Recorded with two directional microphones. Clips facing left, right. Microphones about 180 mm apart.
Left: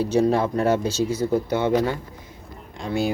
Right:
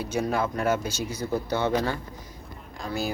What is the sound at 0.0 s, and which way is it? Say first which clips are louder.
Speech: left 7 dB; 30° left (ahead or behind).